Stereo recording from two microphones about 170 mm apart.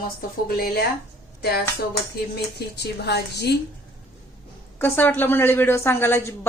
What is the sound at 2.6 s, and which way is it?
Speech, 80° left.